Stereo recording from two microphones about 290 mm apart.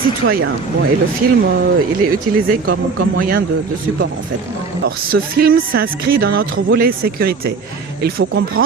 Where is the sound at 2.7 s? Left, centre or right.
Right.